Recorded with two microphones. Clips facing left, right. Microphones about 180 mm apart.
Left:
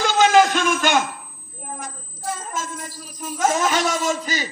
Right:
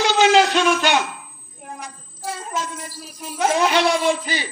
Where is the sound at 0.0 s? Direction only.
50° left (ahead or behind).